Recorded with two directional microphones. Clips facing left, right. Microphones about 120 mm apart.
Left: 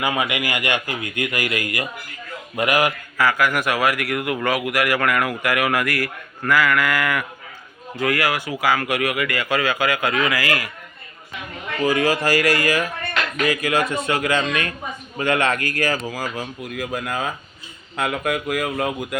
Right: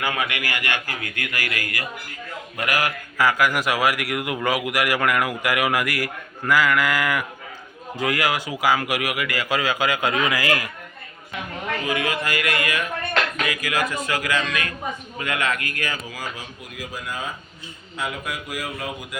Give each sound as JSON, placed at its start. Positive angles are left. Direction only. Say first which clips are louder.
{"t": 0.0, "sound": "a man's voice", "louder": "left 3 dB", "side_deg": 15}
{"t": 3.2, "sound": "speech", "louder": "even", "side_deg": -15}
{"t": 11.9, "sound": "a man's voice", "louder": "left 8 dB", "side_deg": 35}